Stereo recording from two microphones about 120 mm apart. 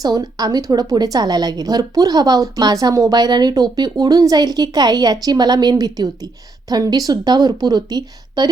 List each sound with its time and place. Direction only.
0.0 s a woman's voice: 35° right (ahead or behind)